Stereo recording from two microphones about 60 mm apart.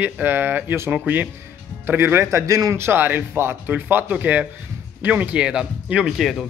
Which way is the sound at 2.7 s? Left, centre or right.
Right.